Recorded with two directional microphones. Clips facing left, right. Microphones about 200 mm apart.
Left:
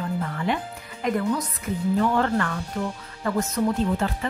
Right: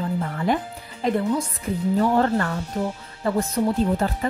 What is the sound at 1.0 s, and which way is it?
Speech, 30° right (ahead or behind).